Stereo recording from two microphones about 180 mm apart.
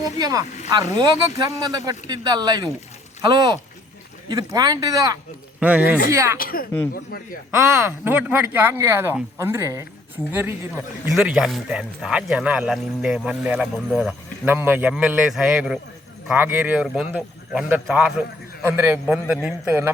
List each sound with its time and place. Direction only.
0.2 s speech: 20° right (ahead or behind)
5.5 s speech: 5° right (ahead or behind)
6.3 s speech: 55° left (ahead or behind)
7.9 s a man's voice: 10° right (ahead or behind)